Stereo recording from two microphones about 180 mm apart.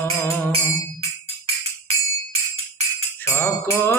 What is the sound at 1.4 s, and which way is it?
Music, 35° right (ahead or behind).